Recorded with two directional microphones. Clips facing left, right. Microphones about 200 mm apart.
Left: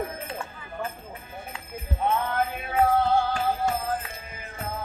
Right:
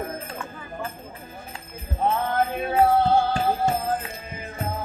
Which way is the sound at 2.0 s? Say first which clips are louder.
Right 3 dB; 35° right (ahead or behind).